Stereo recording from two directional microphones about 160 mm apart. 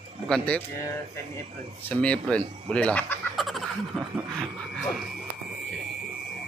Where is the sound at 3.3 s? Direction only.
Centre (ahead or behind).